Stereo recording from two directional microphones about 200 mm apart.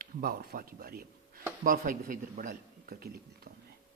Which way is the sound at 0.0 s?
45° right (ahead or behind).